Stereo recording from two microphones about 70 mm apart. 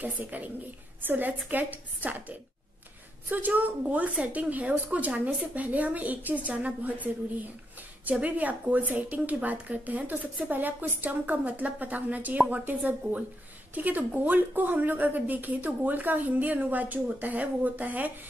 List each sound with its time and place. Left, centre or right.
0.0 s speech: right
8.1 s speech: right